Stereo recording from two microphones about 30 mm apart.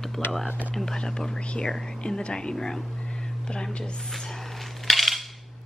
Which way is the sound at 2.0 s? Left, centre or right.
Left.